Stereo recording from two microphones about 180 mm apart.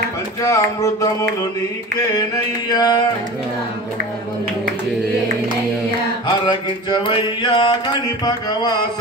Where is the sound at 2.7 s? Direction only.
20° left (ahead or behind).